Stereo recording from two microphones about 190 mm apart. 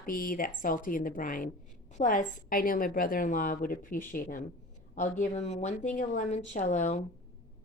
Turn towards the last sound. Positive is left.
turn(degrees=40)  # may be behind; listen again after turning